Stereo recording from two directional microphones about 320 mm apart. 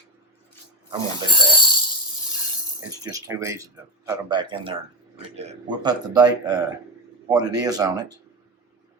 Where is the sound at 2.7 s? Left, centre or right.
Centre.